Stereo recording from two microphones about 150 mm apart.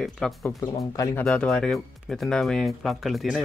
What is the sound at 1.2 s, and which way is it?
Speech, 5° left (ahead or behind).